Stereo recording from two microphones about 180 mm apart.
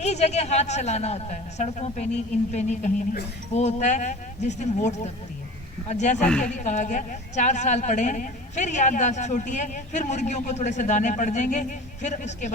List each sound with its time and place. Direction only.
0.0 s a woman's voice: 40° left (ahead or behind)